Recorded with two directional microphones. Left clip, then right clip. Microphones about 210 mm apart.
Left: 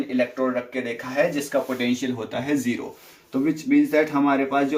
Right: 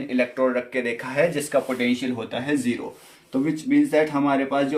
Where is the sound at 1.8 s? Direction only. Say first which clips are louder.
Right 1 dB; 40° right (ahead or behind).